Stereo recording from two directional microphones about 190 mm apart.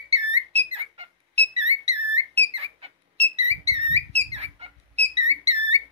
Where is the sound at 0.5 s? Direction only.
30° right (ahead or behind).